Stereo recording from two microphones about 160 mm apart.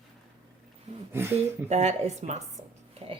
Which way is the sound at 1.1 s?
15° right (ahead or behind).